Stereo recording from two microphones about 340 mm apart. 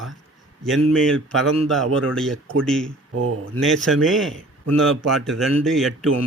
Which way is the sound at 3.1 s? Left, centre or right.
Right.